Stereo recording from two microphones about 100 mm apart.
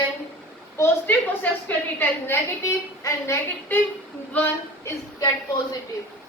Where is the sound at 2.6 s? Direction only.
30° left (ahead or behind).